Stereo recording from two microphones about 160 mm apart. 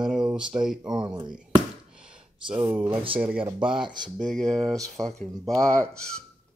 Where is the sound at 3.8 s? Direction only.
25° right (ahead or behind).